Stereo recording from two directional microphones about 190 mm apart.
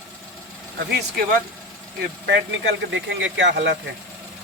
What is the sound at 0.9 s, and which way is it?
Speech, 55° right (ahead or behind).